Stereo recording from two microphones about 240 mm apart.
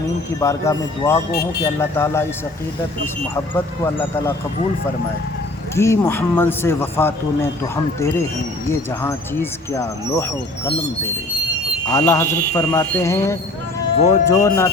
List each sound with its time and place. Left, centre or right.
0.3 s speech: centre
1.3 s speech: left
1.6 s speech: centre
5.7 s speech: centre
11.9 s speech: centre